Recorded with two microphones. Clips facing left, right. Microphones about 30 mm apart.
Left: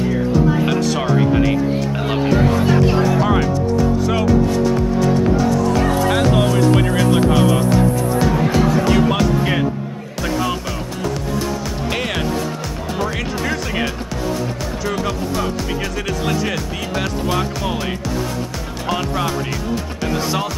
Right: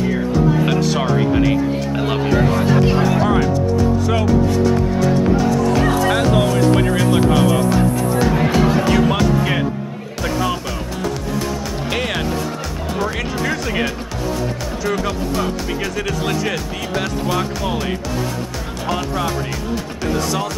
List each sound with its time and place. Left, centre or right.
0.6 s speech: centre
5.7 s music: centre
5.9 s speech: centre
8.3 s speech: right
8.8 s speech: centre
10.2 s speech: centre
11.9 s speech: centre
20.2 s speech: left